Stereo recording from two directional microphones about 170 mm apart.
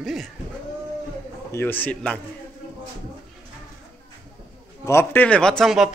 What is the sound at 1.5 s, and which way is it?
Speech, 10° left (ahead or behind).